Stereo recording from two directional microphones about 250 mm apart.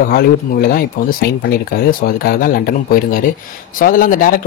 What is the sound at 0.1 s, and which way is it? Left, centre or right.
Speech, left.